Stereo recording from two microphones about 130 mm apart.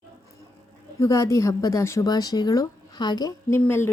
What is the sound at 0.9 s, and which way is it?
A woman's voice, 25° left (ahead or behind).